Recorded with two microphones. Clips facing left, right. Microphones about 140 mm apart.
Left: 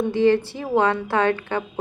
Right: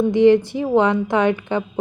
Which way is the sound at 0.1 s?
15° right (ahead or behind).